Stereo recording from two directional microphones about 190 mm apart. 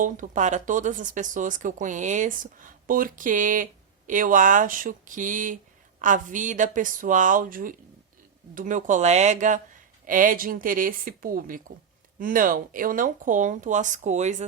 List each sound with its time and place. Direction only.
0.0 s speech: 40° right (ahead or behind)